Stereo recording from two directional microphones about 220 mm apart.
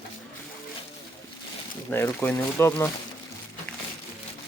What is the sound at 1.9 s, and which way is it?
Speech, 10° left (ahead or behind).